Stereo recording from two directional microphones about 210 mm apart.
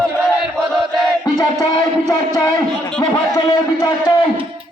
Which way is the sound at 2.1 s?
15° left (ahead or behind).